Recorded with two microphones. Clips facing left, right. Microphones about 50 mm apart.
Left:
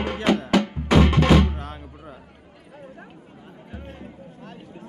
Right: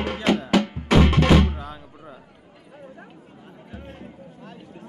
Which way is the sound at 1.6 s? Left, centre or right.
Left.